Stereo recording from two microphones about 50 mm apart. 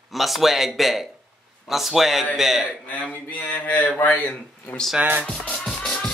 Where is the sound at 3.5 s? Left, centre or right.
Left.